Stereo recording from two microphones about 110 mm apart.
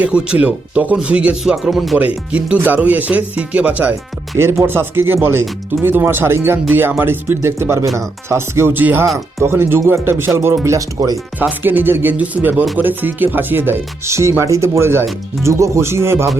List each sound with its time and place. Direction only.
0.0 s speech: 10° right (ahead or behind)
2.0 s speech: 15° right (ahead or behind); by 11.2 s 30° right (ahead or behind)
11.3 s speech: 15° right (ahead or behind)